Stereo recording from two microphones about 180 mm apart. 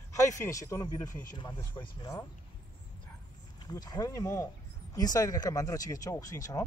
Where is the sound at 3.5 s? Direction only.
20° left (ahead or behind).